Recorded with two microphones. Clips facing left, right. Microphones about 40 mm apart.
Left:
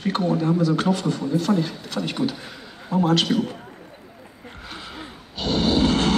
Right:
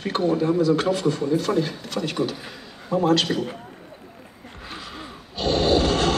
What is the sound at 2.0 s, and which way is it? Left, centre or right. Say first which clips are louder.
Speech: even; centre.